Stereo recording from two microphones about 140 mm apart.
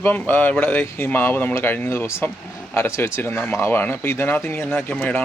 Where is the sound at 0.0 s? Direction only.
15° left (ahead or behind).